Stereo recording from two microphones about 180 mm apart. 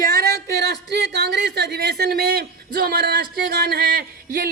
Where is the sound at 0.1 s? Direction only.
60° right (ahead or behind).